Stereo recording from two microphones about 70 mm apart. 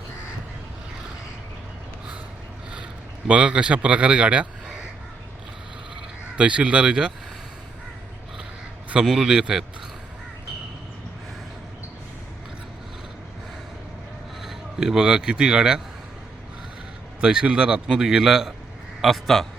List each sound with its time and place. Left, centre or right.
3.2 s a man's voice: centre
6.3 s a man's voice: centre
9.0 s a man's voice: centre
14.4 s speech: centre
17.2 s a man's voice: centre